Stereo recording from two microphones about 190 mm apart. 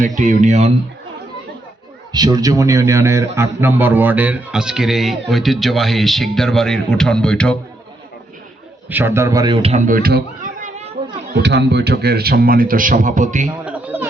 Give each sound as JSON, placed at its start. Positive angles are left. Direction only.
{"t": 0.2, "sound": "speech", "side_deg": -40}
{"t": 2.1, "sound": "a man's voice", "side_deg": -20}
{"t": 8.9, "sound": "a man's voice", "side_deg": -10}
{"t": 9.8, "sound": "speech", "side_deg": -50}
{"t": 10.6, "sound": "children playing", "side_deg": -35}
{"t": 11.3, "sound": "a man's voice", "side_deg": -65}
{"t": 13.7, "sound": "a sound", "side_deg": -10}